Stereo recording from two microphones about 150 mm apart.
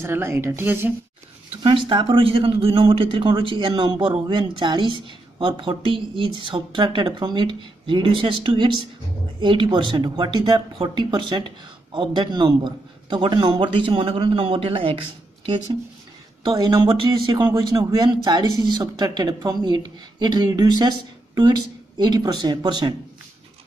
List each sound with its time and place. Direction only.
0.0 s a woman's voice: 15° right (ahead or behind)
1.6 s a man's voice: 35° right (ahead or behind)